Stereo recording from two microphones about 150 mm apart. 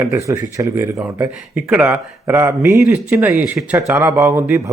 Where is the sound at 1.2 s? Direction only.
5° right (ahead or behind).